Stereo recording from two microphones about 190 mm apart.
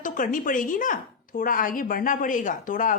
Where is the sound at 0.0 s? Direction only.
45° left (ahead or behind).